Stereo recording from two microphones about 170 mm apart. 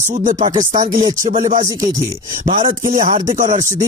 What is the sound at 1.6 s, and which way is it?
Speech, 20° right (ahead or behind).